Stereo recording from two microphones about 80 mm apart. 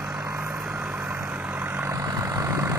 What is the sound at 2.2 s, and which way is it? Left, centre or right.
Vehicle, right.